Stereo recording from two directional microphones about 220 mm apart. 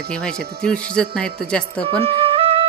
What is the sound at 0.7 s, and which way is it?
Speech, 5° left (ahead or behind).